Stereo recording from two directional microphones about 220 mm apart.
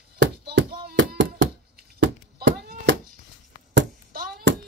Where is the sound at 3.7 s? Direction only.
50° right (ahead or behind).